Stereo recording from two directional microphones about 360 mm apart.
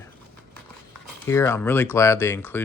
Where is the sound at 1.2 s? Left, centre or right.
Centre.